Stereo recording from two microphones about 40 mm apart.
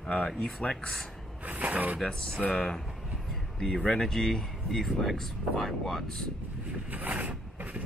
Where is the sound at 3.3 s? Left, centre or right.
Centre.